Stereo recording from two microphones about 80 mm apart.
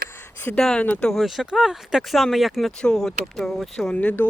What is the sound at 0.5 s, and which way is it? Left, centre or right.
Speech, centre.